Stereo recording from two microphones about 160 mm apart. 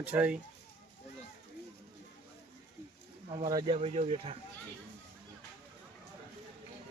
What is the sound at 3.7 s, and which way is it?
Speech, 40° right (ahead or behind).